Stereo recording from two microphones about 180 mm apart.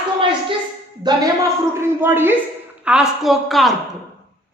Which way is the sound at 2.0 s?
10° right (ahead or behind).